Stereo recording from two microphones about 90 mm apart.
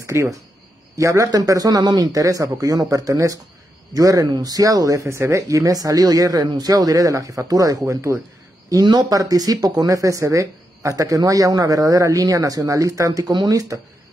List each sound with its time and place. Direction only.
0.0 s speech: 35° right (ahead or behind)